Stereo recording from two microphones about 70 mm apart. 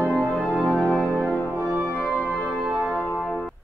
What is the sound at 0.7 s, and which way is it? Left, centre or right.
Music, centre.